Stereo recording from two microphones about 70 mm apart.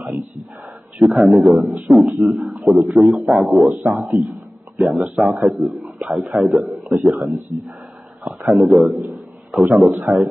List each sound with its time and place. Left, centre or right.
0.9 s a man's voice: centre
3.7 s speech: right
4.1 s a man's voice: centre
8.5 s a man's voice: centre